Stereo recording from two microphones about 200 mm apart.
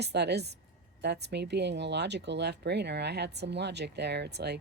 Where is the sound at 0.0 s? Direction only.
55° right (ahead or behind).